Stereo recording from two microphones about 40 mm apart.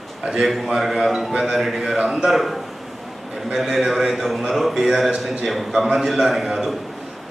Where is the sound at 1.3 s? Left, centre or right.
Centre.